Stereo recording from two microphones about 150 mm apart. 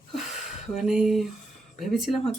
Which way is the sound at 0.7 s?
5° right (ahead or behind).